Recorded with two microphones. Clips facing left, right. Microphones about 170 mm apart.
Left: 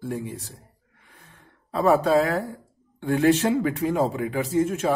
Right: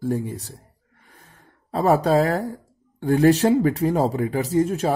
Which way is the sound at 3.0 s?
40° right (ahead or behind).